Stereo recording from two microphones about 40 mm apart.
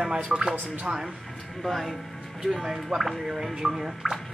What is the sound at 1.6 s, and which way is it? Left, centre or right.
Speech, centre.